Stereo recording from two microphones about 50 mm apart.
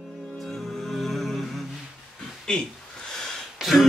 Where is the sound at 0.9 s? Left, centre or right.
Centre.